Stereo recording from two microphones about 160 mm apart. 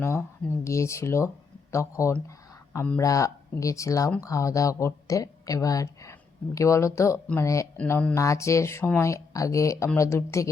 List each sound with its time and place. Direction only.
0.0 s speech: 15° left (ahead or behind)
3.0 s speech: 20° left (ahead or behind)